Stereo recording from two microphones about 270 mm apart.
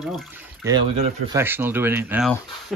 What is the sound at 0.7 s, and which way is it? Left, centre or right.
Speech, centre.